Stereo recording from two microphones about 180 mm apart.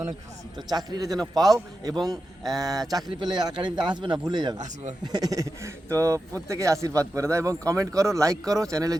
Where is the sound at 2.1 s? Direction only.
20° right (ahead or behind).